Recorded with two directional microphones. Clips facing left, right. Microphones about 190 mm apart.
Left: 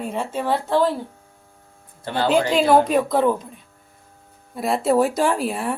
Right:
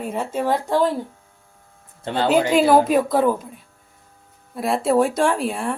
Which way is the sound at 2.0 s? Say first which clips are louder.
Right 1 dB; 25° right (ahead or behind).